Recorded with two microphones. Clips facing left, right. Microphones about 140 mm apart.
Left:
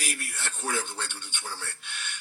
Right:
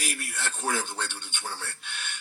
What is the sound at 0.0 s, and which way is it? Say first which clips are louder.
Speech: right 2 dB; 25° right (ahead or behind).